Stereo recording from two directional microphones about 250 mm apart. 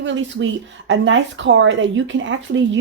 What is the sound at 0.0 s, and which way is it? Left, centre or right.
A woman's voice, right.